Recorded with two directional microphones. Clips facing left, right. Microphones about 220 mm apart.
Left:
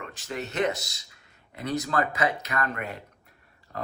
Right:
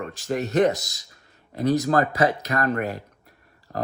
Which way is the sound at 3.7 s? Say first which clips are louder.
Right 6 dB; 50° right (ahead or behind).